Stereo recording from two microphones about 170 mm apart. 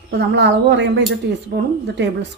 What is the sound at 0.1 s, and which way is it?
Speech, 90° right.